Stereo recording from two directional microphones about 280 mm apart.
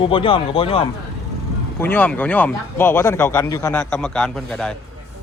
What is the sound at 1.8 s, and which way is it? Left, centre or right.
Speech, centre.